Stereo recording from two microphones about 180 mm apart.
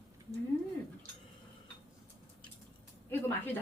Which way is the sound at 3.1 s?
10° left (ahead or behind).